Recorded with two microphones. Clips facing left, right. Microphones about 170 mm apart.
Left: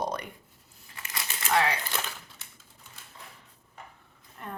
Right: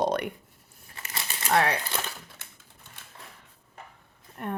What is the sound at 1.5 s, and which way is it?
Speech, 55° right (ahead or behind).